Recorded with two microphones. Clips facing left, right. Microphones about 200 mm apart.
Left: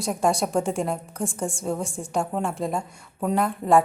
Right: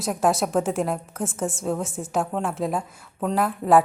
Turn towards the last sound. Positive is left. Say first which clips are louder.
# right 1 dB
turn(degrees=-5)  # may be behind; listen again after turning